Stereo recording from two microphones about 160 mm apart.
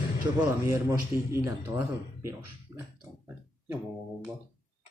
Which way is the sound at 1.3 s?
15° right (ahead or behind).